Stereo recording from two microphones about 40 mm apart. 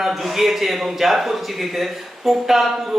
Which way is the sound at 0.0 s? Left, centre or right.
Centre.